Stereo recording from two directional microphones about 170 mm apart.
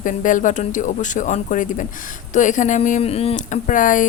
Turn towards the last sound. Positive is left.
turn(degrees=50)  # may be behind; listen again after turning